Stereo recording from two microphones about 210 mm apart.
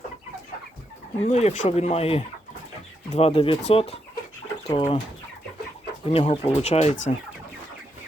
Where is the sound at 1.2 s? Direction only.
30° left (ahead or behind).